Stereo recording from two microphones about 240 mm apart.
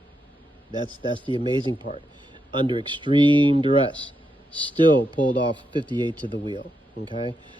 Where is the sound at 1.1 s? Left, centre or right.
Left.